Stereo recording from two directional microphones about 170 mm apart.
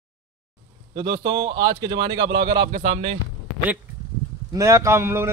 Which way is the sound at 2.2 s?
85° right.